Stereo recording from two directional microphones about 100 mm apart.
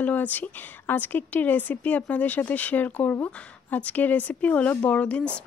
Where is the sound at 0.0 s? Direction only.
15° left (ahead or behind).